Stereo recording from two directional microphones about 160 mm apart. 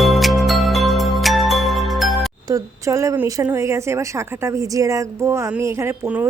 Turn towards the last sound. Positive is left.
turn(degrees=-15)  # may be behind; listen again after turning